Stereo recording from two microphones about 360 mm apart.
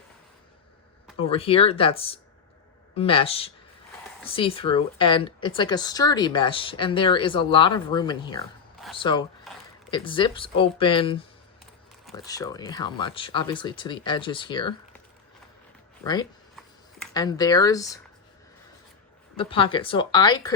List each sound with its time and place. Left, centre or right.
1.2 s speech: centre
16.6 s a sound: centre
19.4 s speech: centre